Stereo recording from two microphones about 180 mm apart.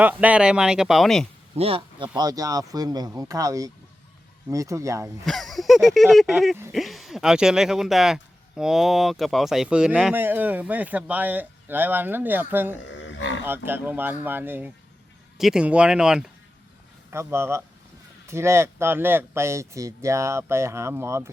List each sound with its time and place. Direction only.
0.0 s speech: 10° right (ahead or behind)
1.5 s speech: 30° right (ahead or behind)
2.1 s speech: 20° right (ahead or behind)
5.2 s speech: centre (ahead or behind)
12.8 s livestock: 85° left
13.7 s speech: 10° right (ahead or behind)
17.1 s speech: 15° right (ahead or behind)